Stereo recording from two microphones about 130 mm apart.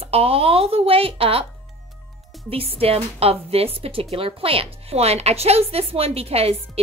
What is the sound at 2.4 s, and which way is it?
A woman's voice, 45° right (ahead or behind).